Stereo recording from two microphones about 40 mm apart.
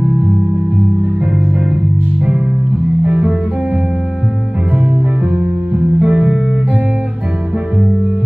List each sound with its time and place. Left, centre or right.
0.0 s music: right
3.0 s music: right
4.7 s music: right